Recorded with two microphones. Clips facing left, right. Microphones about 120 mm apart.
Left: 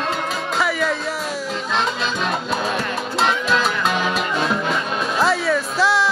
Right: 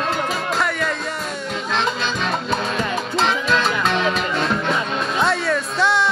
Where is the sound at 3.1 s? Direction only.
Centre (ahead or behind).